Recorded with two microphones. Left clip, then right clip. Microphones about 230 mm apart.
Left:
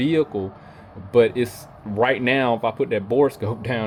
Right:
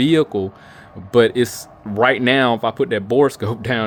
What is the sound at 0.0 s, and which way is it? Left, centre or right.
Speech, right.